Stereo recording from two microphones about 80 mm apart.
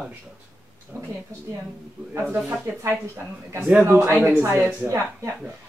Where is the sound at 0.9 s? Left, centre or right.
Right.